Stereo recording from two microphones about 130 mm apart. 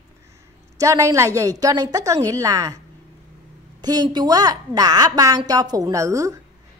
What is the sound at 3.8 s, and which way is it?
A woman's voice, 30° right (ahead or behind).